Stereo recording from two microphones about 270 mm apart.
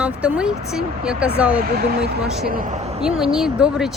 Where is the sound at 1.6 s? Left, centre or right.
Right.